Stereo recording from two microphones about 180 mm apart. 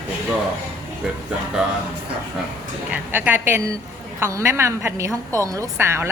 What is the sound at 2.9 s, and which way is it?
A woman's voice, 10° right (ahead or behind).